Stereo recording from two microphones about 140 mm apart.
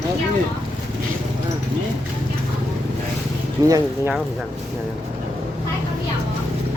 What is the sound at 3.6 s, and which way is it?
Speech, 25° right (ahead or behind).